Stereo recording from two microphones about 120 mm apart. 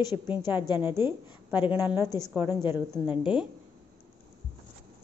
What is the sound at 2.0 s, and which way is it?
A woman's voice, 25° right (ahead or behind).